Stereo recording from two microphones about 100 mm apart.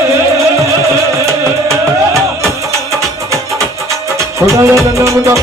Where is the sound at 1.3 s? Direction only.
30° right (ahead or behind).